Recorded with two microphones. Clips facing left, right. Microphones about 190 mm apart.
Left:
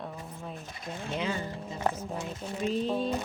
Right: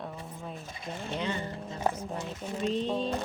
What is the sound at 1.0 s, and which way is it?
Speech, 5° left (ahead or behind).